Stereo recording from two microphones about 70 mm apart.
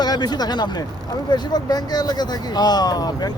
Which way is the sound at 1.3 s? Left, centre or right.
Left.